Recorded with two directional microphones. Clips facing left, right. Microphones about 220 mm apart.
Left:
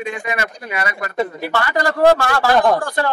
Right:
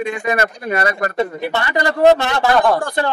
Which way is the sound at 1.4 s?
20° right (ahead or behind).